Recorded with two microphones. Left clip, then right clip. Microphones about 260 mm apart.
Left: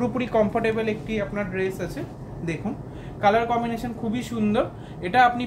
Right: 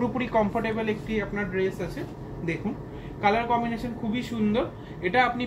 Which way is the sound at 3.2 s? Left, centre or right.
Left.